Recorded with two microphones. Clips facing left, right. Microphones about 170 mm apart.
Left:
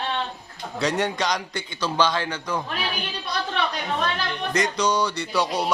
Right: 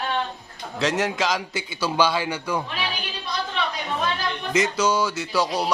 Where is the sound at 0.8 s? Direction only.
Centre (ahead or behind).